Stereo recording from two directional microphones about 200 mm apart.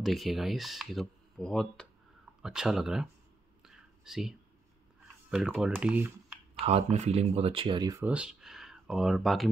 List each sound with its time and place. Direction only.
0.0 s speech: centre (ahead or behind)
3.6 s whispering: 5° right (ahead or behind)
5.3 s speech: 5° right (ahead or behind)
6.6 s speech: 35° right (ahead or behind)
8.0 s speech: 5° right (ahead or behind)